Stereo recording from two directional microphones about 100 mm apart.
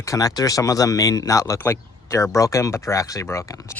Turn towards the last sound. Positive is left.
turn(degrees=30)  # may be behind; listen again after turning